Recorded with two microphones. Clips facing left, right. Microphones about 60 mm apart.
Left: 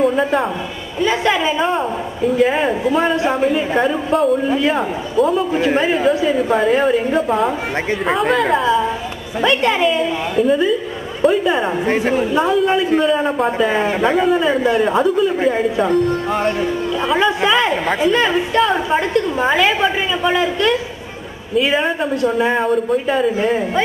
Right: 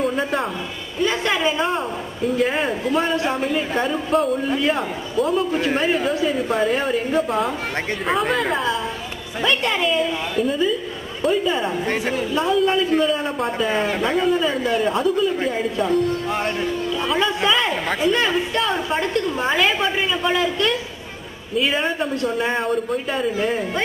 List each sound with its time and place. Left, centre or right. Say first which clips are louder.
0.0 s a man's voice: left 6 dB; centre
12.0 s a man's voice: left 6 dB; left; by 16.4 s centre
17.5 s a woman's voice: left 4 dB; centre